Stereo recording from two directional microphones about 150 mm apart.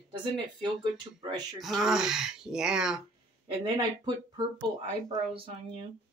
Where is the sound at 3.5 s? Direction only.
30° right (ahead or behind).